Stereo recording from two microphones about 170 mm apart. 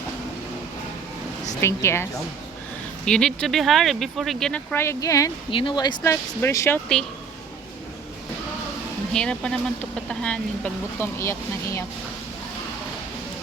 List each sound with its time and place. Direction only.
1.6 s speech: 15° left (ahead or behind)
3.1 s speech: 5° left (ahead or behind); by 5.3 s 20° left (ahead or behind)
5.5 s speech: 30° left (ahead or behind)
9.1 s speech: 5° left (ahead or behind)
11.2 s speech: 15° left (ahead or behind)